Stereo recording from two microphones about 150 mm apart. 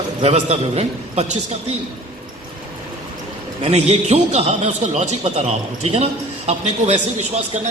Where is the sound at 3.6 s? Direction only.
45° right (ahead or behind).